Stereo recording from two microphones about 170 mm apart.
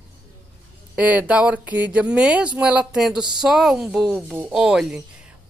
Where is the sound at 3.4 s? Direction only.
Centre (ahead or behind).